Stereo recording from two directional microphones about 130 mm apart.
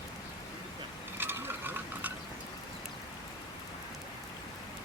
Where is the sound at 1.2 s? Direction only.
15° right (ahead or behind).